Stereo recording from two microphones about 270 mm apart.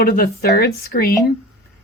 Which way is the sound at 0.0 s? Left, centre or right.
Left.